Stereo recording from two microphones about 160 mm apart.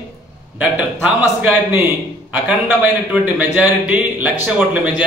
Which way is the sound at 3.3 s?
10° right (ahead or behind).